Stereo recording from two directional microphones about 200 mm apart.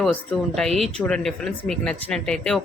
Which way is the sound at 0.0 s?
Centre (ahead or behind).